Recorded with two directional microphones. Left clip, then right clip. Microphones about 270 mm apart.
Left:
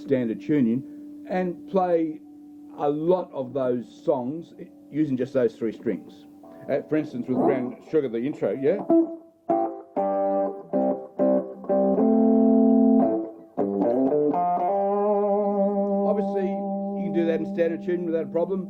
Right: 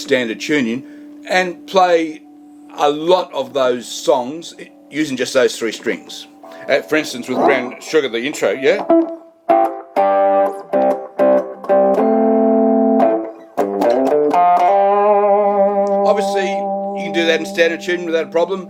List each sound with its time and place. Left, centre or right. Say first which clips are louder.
0.0 s a man's voice: right 8 dB; centre
6.7 s a sound: right 10 dB; centre
16.6 s music: right 10 dB; right
16.9 s speech: right 8 dB; centre